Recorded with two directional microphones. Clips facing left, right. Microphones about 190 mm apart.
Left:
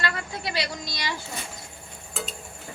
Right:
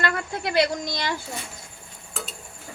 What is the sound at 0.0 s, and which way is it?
A woman's voice, 55° right (ahead or behind).